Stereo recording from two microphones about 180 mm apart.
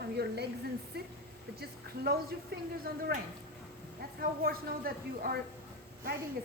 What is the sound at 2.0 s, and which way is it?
A woman's voice, 60° right (ahead or behind).